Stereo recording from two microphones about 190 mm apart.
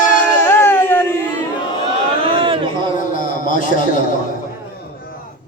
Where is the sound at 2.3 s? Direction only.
30° right (ahead or behind).